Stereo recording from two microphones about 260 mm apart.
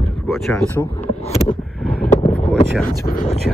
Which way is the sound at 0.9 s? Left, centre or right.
Left.